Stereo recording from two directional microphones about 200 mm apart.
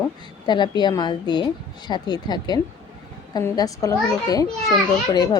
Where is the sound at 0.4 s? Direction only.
20° left (ahead or behind).